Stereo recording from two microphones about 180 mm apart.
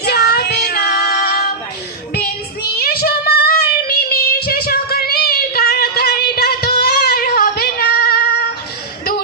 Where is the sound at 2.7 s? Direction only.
60° left (ahead or behind).